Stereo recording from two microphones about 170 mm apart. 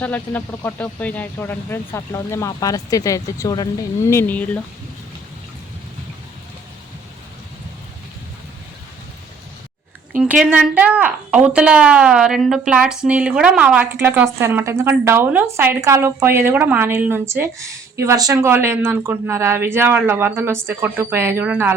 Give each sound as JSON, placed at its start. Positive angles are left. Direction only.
{"t": 0.0, "sound": "speech", "side_deg": 10}
{"t": 10.4, "sound": "speech", "side_deg": -5}